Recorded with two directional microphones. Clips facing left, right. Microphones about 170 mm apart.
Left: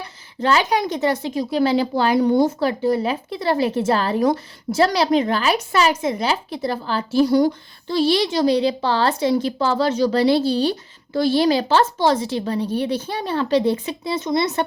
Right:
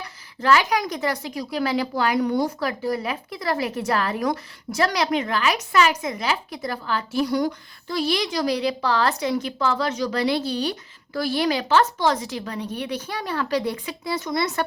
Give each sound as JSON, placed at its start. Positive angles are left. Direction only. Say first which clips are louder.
{"t": 0.4, "sound": "speech", "louder": "left 2 dB", "side_deg": 30}